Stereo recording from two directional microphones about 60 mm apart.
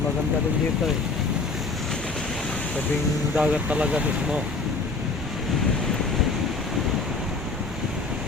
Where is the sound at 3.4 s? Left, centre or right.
Right.